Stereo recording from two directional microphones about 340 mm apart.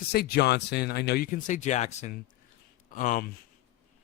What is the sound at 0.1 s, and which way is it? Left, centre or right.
Speech, left.